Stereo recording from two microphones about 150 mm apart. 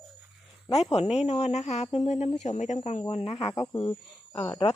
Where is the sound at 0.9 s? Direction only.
45° left (ahead or behind).